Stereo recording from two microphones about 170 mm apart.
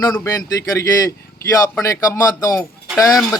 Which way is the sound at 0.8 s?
15° left (ahead or behind).